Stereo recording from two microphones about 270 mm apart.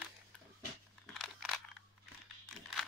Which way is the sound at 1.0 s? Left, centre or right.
Centre.